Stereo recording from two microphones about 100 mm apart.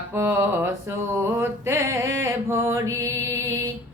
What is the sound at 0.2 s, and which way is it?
Mantra, 25° right (ahead or behind).